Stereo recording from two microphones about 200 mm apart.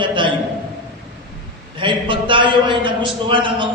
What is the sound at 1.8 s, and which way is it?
A man's voice, 25° right (ahead or behind).